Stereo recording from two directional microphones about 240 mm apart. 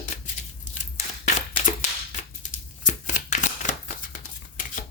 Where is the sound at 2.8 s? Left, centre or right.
Left.